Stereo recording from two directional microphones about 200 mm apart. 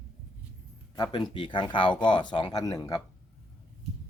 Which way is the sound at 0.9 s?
20° left (ahead or behind).